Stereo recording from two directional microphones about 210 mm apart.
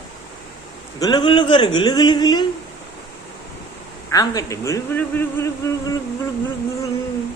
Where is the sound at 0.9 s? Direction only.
20° left (ahead or behind).